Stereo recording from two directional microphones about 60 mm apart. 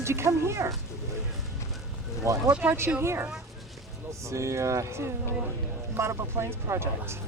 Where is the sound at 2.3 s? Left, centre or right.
Right.